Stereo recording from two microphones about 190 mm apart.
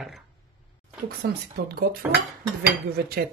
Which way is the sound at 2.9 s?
55° right (ahead or behind).